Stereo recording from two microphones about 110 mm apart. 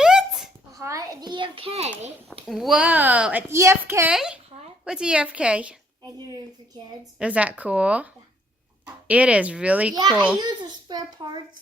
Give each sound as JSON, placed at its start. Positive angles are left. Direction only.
{"t": 0.0, "sound": "a sound", "side_deg": -5}
{"t": 0.8, "sound": "a sound", "side_deg": -30}
{"t": 2.5, "sound": "speech", "side_deg": 0}
{"t": 3.5, "sound": "a woman's voice", "side_deg": -25}
{"t": 4.1, "sound": "speech", "side_deg": -5}
{"t": 6.1, "sound": "a child's voice", "side_deg": -35}
{"t": 7.2, "sound": "speech", "side_deg": -10}
{"t": 9.0, "sound": "speech", "side_deg": -10}
{"t": 10.3, "sound": "a child's voice", "side_deg": -40}